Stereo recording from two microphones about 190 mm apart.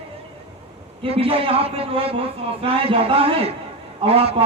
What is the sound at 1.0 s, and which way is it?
A man's voice, 30° right (ahead or behind).